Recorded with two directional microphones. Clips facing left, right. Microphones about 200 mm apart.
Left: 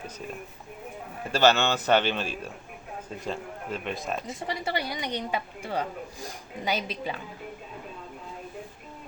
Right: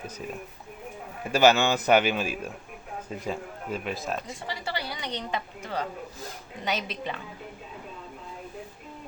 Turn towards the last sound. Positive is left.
turn(degrees=5)  # may be behind; listen again after turning